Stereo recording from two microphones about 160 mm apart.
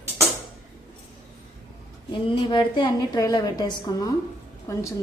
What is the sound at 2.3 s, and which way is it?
A woman's voice, 30° left (ahead or behind).